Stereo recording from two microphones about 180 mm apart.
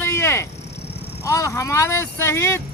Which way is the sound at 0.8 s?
65° left (ahead or behind).